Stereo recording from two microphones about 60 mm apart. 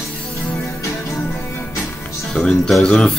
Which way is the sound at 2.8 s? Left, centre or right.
Centre.